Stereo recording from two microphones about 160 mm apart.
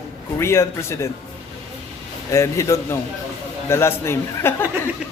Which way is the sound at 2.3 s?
20° left (ahead or behind).